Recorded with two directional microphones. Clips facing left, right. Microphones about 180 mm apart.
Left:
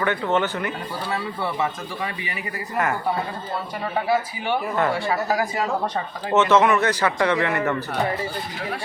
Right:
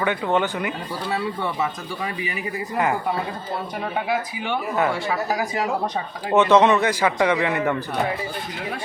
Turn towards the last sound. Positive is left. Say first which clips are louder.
# right 1 dB
turn(degrees=-15)  # may be behind; listen again after turning